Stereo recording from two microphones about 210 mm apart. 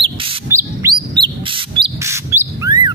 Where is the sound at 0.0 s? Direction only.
25° right (ahead or behind).